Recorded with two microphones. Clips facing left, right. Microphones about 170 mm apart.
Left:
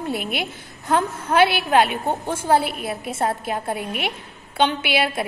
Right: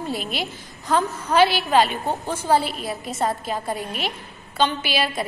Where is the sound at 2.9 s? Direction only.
10° left (ahead or behind).